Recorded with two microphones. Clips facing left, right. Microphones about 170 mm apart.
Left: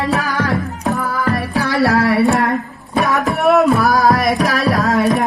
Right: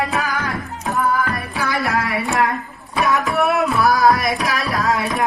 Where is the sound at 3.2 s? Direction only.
40° left (ahead or behind).